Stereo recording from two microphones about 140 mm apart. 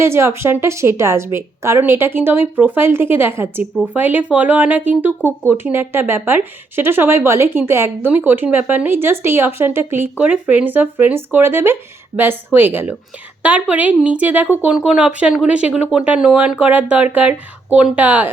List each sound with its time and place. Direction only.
0.0 s speech: 20° right (ahead or behind)